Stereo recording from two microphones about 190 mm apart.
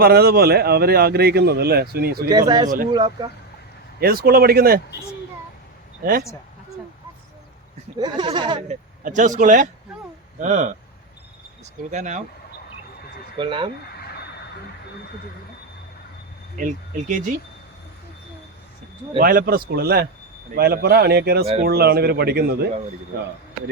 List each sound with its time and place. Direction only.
0.0 s a man's voice: 55° right (ahead or behind)
2.9 s speech: 20° right (ahead or behind)
4.0 s a man's voice: 50° right (ahead or behind)
6.0 s speech: 50° right (ahead or behind)
7.9 s speech: 20° right (ahead or behind)
8.6 s speech: 40° right (ahead or behind)
13.3 s speech: 25° right (ahead or behind)
16.6 s speech: 40° right (ahead or behind)
19.2 s a man's voice: 50° right (ahead or behind)